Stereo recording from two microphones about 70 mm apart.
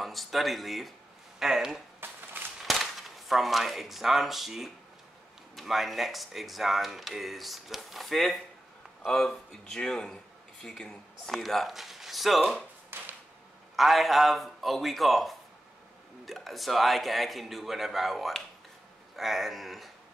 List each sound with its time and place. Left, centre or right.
0.0 s speech: centre
2.0 s chop: right
2.6 s speech: centre
12.9 s a sound: right
13.7 s speech: centre